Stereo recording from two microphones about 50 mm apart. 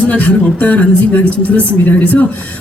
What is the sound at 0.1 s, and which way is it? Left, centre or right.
A man's voice, left.